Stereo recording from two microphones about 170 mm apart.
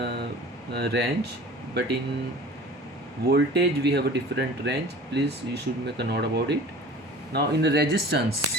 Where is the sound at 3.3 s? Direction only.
75° right (ahead or behind).